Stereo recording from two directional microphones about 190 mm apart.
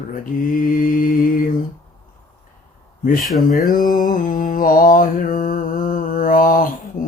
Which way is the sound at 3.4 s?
45° left (ahead or behind).